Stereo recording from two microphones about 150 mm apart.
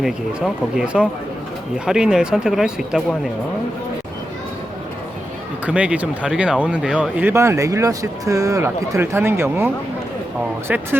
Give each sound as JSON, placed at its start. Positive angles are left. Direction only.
{"t": 0.0, "sound": "speech", "side_deg": 0}
{"t": 5.6, "sound": "speech", "side_deg": -10}
{"t": 10.7, "sound": "speech", "side_deg": -10}